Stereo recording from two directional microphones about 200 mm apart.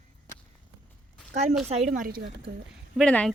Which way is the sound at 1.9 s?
45° right (ahead or behind).